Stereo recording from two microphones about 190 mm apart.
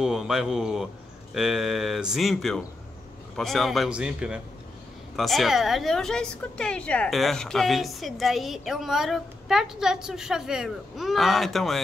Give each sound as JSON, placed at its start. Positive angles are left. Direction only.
{"t": 0.0, "sound": "a woman's voice", "side_deg": -5}